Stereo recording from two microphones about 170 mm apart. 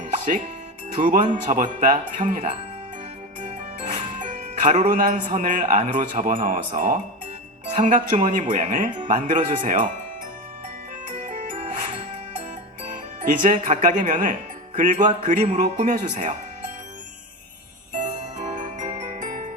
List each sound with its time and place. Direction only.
1.0 s speech: 45° right (ahead or behind)
3.9 s a man's voice: 45° right (ahead or behind)
11.2 s music: 50° right (ahead or behind)
12.9 s speech: 50° right (ahead or behind)
17.9 s jingle bell: 45° right (ahead or behind)